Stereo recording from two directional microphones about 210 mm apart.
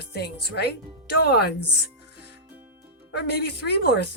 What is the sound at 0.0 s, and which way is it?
A woman's voice, 50° left (ahead or behind).